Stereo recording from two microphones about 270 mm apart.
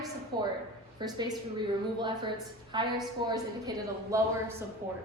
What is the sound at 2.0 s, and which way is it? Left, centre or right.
A woman's voice, centre.